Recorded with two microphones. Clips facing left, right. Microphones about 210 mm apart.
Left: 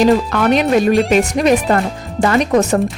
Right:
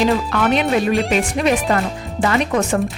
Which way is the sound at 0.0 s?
45° left (ahead or behind).